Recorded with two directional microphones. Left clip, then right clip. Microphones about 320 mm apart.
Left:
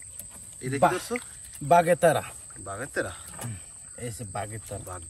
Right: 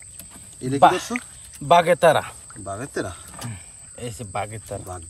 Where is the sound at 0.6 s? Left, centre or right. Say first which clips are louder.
Right 8 dB; centre.